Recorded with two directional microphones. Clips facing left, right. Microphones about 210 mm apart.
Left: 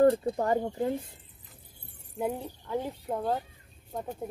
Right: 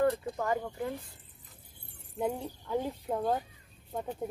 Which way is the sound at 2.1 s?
Centre (ahead or behind).